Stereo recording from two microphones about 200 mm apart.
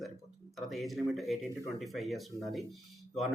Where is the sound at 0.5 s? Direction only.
Centre (ahead or behind).